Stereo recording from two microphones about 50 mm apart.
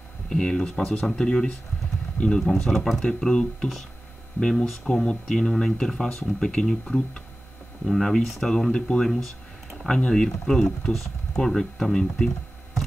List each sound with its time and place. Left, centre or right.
0.3 s speech: centre
2.4 s speech: centre
3.1 s speech: centre
9.1 s a sound: centre
9.9 s speech: centre